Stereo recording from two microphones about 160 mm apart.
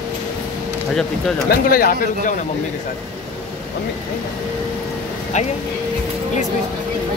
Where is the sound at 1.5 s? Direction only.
65° left (ahead or behind).